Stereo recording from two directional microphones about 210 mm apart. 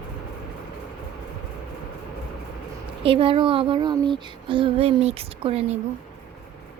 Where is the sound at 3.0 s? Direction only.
25° right (ahead or behind).